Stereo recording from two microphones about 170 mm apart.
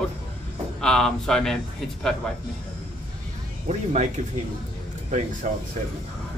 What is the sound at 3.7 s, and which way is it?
Speech, 40° right (ahead or behind).